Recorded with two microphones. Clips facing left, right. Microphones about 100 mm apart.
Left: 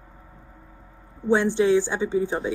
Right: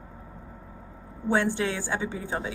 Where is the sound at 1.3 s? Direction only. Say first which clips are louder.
Left 7 dB; 20° left (ahead or behind).